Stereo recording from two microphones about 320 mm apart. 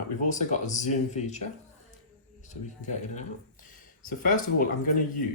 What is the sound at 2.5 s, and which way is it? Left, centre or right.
Speech, left.